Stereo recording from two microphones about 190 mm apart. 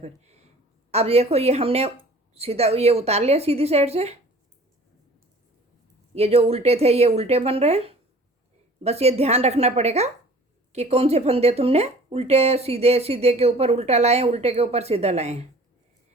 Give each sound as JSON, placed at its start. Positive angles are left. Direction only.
{"t": 0.0, "sound": "a sound", "side_deg": -35}
{"t": 0.9, "sound": "speech", "side_deg": -35}
{"t": 6.1, "sound": "speech", "side_deg": -30}